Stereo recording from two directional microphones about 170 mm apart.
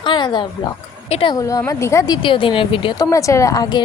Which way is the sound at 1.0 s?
35° left (ahead or behind).